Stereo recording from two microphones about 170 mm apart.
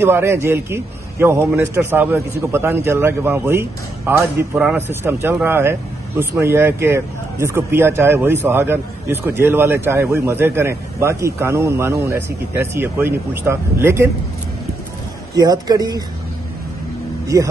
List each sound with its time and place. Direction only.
0.0 s speech: 15° right (ahead or behind)
15.3 s a man's voice: 25° right (ahead or behind)